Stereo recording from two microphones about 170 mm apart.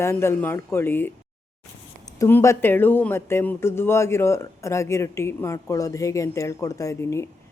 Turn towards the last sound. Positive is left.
turn(degrees=15)  # may be behind; listen again after turning